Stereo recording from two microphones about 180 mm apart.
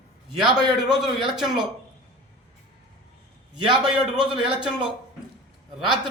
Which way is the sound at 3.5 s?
25° right (ahead or behind).